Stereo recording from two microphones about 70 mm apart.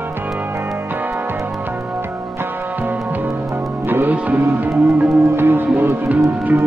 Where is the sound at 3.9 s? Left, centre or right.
Right.